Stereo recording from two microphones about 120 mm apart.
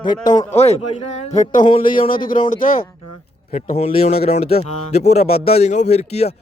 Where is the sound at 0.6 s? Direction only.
60° left (ahead or behind).